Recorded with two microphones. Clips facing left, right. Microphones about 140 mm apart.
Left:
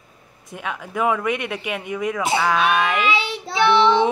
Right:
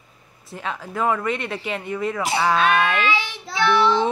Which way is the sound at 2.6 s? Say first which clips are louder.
Even; 10° left (ahead or behind).